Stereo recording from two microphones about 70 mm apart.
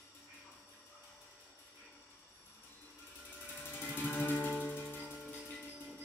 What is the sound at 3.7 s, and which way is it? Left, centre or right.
Music, left.